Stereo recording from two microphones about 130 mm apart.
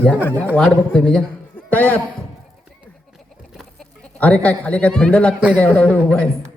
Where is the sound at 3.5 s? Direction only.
Centre (ahead or behind).